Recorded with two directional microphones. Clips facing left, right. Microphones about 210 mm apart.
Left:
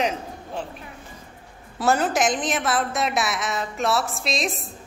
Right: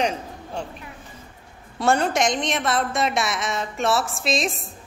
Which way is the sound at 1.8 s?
5° left (ahead or behind).